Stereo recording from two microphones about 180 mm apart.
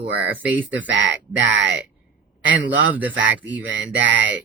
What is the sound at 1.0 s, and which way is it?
Speech, 80° right.